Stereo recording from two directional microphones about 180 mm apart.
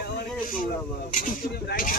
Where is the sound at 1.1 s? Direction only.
50° left (ahead or behind).